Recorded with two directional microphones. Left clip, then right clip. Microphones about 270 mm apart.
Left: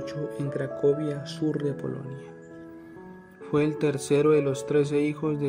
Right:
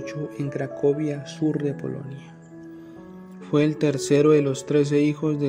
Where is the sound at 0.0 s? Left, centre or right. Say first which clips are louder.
Right 1 dB; centre.